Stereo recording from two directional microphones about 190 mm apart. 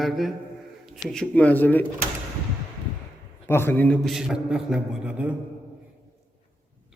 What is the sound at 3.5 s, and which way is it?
A man's voice, 10° left (ahead or behind).